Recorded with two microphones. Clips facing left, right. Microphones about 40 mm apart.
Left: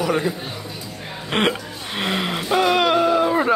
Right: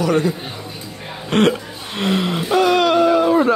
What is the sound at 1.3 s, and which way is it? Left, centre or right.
Speech, left.